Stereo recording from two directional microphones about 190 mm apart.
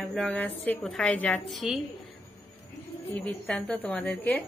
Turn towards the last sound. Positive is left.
turn(degrees=10)  # may be behind; listen again after turning